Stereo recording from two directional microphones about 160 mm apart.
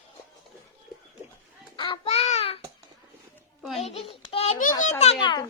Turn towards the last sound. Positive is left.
turn(degrees=25)  # may be behind; listen again after turning